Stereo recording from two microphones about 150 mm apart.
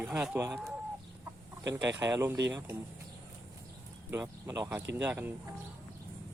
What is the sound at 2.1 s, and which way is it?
Speech, 20° right (ahead or behind).